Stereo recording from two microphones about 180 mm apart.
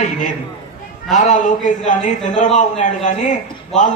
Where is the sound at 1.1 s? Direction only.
45° left (ahead or behind).